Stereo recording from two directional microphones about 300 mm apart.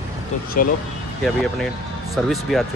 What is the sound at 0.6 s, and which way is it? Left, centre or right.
Speech, left.